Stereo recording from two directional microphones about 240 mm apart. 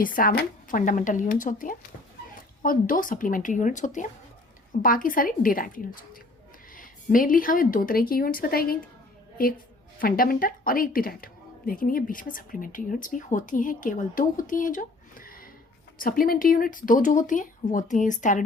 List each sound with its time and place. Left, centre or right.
0.0 s a woman's voice: left